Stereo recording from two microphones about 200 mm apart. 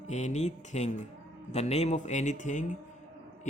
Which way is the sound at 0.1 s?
35° left (ahead or behind).